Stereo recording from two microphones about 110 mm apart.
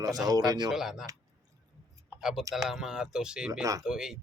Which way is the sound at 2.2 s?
5° right (ahead or behind).